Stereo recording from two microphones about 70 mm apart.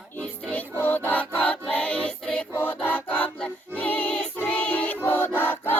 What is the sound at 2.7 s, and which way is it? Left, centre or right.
Music, left.